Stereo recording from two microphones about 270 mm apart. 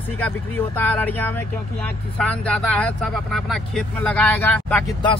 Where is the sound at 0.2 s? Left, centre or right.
Centre.